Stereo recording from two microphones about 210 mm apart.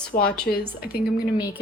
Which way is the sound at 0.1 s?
45° left (ahead or behind).